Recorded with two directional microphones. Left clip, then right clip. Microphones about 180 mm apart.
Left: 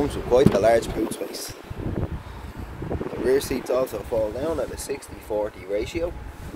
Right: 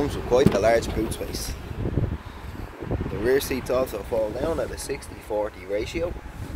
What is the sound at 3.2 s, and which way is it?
Speech, centre (ahead or behind).